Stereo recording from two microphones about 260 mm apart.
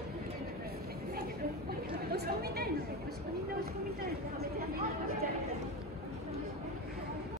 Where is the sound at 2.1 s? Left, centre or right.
Right.